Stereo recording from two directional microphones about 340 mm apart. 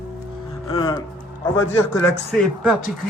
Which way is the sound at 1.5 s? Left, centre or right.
Centre.